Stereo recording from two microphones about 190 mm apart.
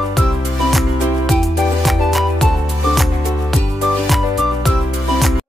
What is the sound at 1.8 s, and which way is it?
Music, centre (ahead or behind).